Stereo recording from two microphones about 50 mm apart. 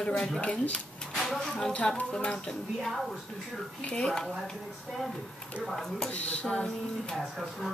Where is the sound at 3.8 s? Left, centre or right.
Left.